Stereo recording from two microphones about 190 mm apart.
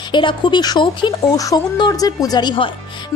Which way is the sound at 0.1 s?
25° left (ahead or behind).